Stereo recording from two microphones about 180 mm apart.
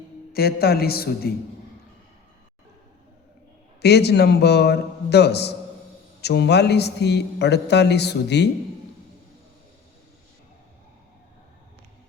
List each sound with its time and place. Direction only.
0.3 s a man's voice: 60° left (ahead or behind)
3.8 s a man's voice: 65° left (ahead or behind)